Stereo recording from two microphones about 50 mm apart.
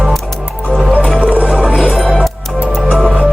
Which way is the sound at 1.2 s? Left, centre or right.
Right.